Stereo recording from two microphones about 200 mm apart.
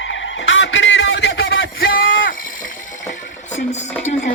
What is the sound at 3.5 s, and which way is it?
Music, 35° left (ahead or behind).